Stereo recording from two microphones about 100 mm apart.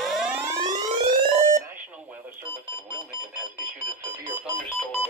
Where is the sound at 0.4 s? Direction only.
35° right (ahead or behind).